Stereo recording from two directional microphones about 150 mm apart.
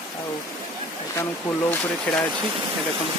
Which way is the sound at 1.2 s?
20° left (ahead or behind).